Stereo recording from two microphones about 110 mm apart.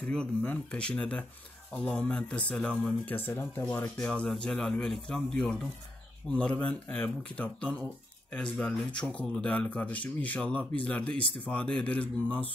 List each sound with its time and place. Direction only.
0.1 s speech: 10° left (ahead or behind)